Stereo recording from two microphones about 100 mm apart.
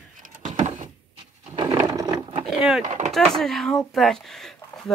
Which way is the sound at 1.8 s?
35° right (ahead or behind).